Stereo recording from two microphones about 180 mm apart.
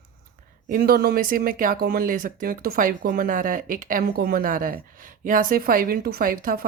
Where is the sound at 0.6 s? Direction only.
50° right (ahead or behind).